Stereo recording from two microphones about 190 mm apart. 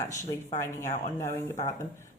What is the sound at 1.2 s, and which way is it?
Speech, 40° left (ahead or behind).